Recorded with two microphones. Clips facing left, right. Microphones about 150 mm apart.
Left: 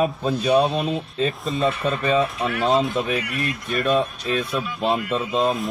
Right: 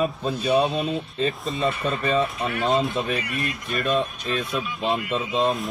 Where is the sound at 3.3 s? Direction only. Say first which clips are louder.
Left 3 dB; centre (ahead or behind).